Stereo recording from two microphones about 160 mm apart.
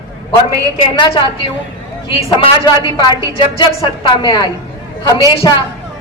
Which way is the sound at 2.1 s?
30° left (ahead or behind).